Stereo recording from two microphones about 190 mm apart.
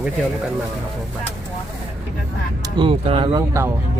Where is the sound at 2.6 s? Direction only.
25° right (ahead or behind).